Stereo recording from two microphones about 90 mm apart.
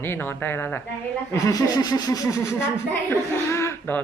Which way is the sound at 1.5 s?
50° left (ahead or behind).